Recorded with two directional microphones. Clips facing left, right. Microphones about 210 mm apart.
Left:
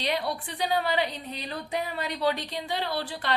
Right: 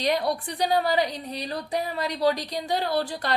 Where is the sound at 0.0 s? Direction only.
45° right (ahead or behind).